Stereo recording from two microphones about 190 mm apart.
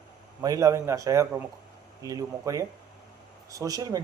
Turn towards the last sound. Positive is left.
turn(degrees=-20)  # may be behind; listen again after turning